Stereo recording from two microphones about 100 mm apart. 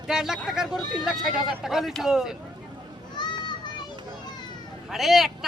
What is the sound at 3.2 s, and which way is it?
Children playing, 45° left (ahead or behind).